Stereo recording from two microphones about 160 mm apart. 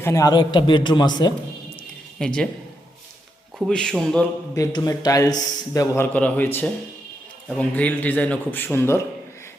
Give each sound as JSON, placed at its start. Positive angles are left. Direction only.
{"t": 0.0, "sound": "a man's voice", "side_deg": 20}
{"t": 2.1, "sound": "speech", "side_deg": 5}
{"t": 3.7, "sound": "speech", "side_deg": 5}
{"t": 4.5, "sound": "a man's voice", "side_deg": 20}